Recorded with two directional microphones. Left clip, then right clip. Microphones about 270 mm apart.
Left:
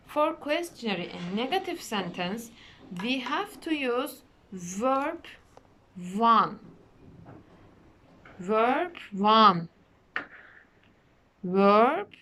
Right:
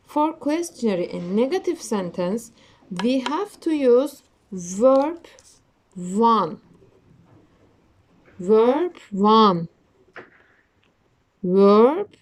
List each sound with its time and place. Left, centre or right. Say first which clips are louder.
0.1 s speech: right 4 dB; right
8.4 s speech: right 8 dB; centre
11.5 s speech: right 6 dB; centre